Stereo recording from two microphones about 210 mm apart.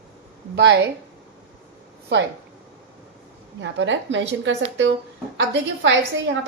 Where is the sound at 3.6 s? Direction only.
60° right (ahead or behind).